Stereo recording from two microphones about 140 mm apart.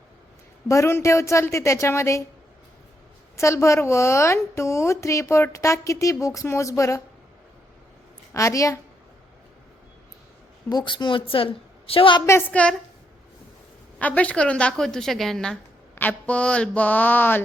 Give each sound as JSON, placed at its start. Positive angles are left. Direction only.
{"t": 0.7, "sound": "a woman's voice", "side_deg": 20}
{"t": 3.3, "sound": "a woman's voice", "side_deg": 20}
{"t": 8.3, "sound": "a woman's voice", "side_deg": 20}
{"t": 10.7, "sound": "a woman's voice", "side_deg": 30}
{"t": 12.2, "sound": "mantra", "side_deg": 15}
{"t": 14.0, "sound": "a woman's voice", "side_deg": 10}
{"t": 16.0, "sound": "mantra", "side_deg": 10}